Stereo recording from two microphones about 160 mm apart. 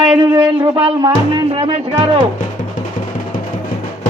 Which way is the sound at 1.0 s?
25° right (ahead or behind).